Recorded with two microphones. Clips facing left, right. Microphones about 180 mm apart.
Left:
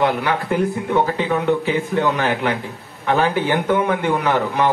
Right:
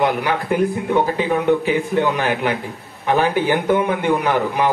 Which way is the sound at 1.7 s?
15° right (ahead or behind).